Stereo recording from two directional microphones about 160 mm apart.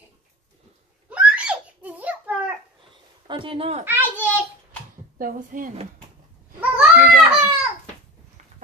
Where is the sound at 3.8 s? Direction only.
10° right (ahead or behind).